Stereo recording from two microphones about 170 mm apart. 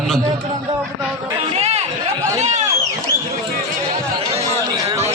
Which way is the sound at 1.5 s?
40° right (ahead or behind).